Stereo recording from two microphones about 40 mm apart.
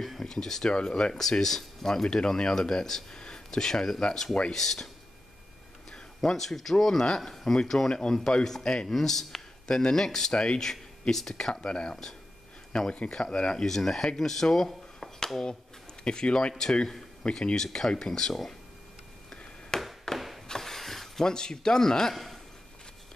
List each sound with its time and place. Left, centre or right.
0.0 s speech: centre
2.0 s speech: centre
3.2 s a sound: centre
4.0 s speech: centre
5.9 s speech: centre
11.6 s speech: left
13.7 s speech: centre
15.0 s a sound: centre
16.0 s speech: left
19.7 s a sound: centre
21.2 s speech: centre
22.1 s a man's voice: centre